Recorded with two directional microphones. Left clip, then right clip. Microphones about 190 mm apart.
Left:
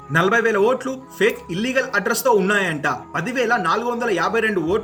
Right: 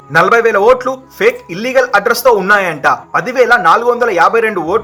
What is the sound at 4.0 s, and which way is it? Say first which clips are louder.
Speech: right 11 dB; 30° left (ahead or behind).